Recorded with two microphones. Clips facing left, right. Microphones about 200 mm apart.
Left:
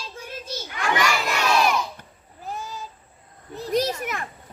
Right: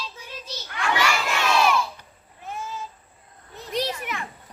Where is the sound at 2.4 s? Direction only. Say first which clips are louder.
Even; 35° left (ahead or behind).